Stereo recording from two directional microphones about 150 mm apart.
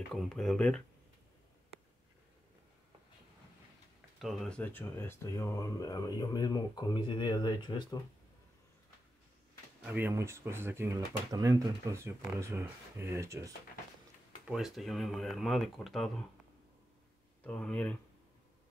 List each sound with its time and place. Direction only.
0.1 s speech: centre (ahead or behind)
4.2 s speech: centre (ahead or behind); by 8.0 s 30° left (ahead or behind)
9.8 s speech: 15° right (ahead or behind)
14.4 s speech: centre (ahead or behind)
17.4 s speech: 10° left (ahead or behind)